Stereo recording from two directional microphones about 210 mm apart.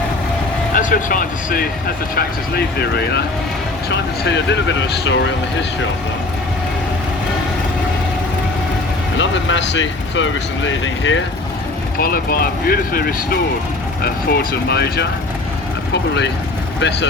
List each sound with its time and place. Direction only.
0.7 s speech: 40° left (ahead or behind)
4.8 s speech: 60° left (ahead or behind)
9.1 s speech: 60° left (ahead or behind)
11.9 s speech: 45° left (ahead or behind)